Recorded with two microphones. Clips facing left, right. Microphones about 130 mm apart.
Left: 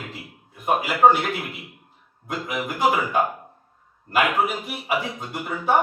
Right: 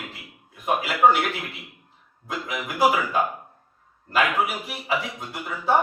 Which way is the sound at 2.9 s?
25° left (ahead or behind).